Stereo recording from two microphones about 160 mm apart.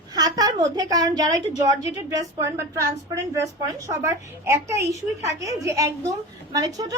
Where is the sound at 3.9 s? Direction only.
20° right (ahead or behind).